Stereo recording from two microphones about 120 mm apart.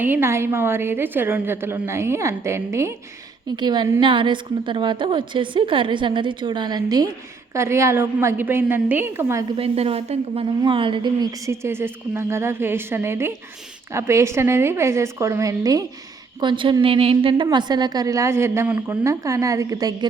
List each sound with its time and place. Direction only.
0.0 s a woman's voice: 15° right (ahead or behind)
3.5 s a woman's voice: 40° right (ahead or behind)
7.5 s a woman's voice: 25° right (ahead or behind)
9.6 s a woman's voice: 55° right (ahead or behind); by 15.8 s 30° right (ahead or behind)
16.4 s a woman's voice: 40° right (ahead or behind)